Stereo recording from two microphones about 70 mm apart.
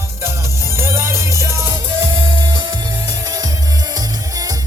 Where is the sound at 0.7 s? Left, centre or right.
Right.